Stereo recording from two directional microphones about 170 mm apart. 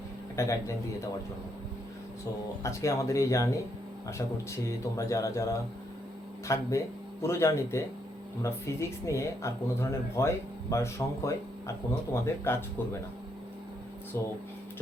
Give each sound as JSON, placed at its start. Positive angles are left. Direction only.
{"t": 0.4, "sound": "speech", "side_deg": 15}
{"t": 2.6, "sound": "speech", "side_deg": 20}
{"t": 14.1, "sound": "speech", "side_deg": 15}